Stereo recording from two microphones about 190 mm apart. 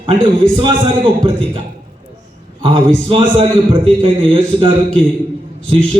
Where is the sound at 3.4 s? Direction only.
30° right (ahead or behind).